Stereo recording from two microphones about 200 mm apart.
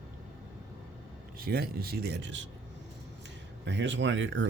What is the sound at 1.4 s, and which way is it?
Speech, 50° right (ahead or behind).